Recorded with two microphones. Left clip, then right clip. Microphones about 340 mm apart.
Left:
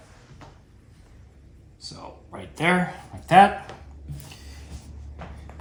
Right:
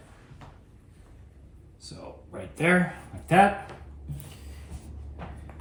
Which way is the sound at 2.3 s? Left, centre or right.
Centre.